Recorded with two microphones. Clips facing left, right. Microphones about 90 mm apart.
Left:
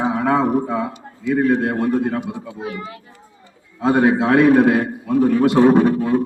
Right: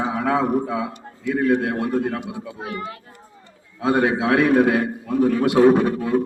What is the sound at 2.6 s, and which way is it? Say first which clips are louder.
Speech: even; 50° right (ahead or behind).